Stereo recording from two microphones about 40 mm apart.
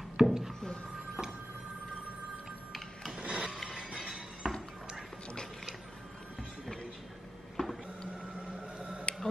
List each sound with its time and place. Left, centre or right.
0.2 s a sound: centre
0.9 s printer: centre
3.2 s printer: right
3.6 s music: centre
7.6 s printer: centre
8.5 s a sound: right